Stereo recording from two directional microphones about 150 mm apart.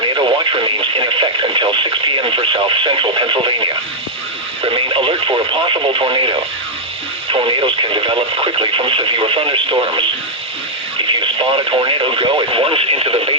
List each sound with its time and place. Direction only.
0.0 s speech: 30° right (ahead or behind)